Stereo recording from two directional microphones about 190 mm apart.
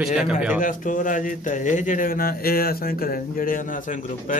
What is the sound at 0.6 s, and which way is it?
A man's voice, 45° left (ahead or behind).